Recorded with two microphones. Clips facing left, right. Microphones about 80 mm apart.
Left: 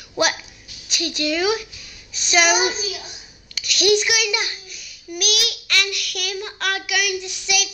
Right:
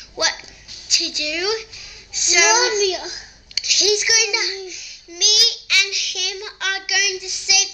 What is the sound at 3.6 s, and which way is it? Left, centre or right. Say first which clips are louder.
A child's voice: left 3 dB; centre.